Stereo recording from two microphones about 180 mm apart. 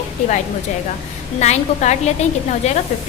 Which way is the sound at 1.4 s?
40° left (ahead or behind).